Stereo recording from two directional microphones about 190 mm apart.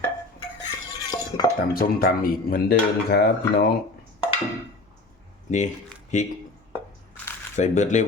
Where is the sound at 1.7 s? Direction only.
50° left (ahead or behind).